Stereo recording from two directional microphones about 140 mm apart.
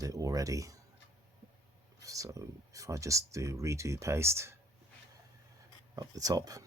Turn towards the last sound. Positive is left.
turn(degrees=-25)  # may be behind; listen again after turning